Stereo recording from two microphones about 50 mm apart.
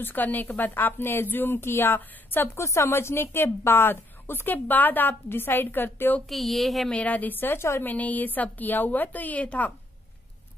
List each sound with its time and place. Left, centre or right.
0.0 s a woman's voice: left
2.5 s a woman's voice: left
6.2 s a woman's voice: centre
6.9 s a woman's voice: left